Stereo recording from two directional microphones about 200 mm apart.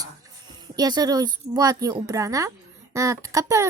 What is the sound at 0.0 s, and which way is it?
Speech, 20° right (ahead or behind).